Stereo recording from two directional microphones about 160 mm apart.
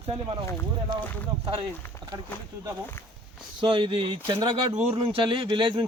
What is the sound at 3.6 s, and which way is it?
Speech, 30° right (ahead or behind).